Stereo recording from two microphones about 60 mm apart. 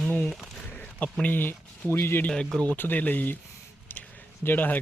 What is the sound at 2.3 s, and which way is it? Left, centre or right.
Speech, centre.